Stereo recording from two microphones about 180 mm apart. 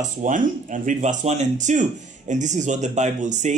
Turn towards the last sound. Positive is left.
turn(degrees=-40)  # may be behind; listen again after turning